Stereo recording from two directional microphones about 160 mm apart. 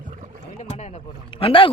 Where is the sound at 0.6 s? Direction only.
40° left (ahead or behind).